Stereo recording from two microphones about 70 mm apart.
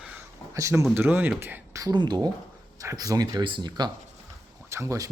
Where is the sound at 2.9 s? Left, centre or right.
Right.